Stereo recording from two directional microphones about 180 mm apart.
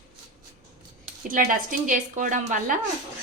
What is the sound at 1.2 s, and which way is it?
A woman's voice, 50° right (ahead or behind).